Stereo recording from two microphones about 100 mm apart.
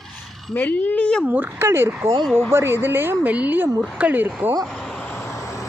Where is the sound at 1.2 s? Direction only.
15° right (ahead or behind).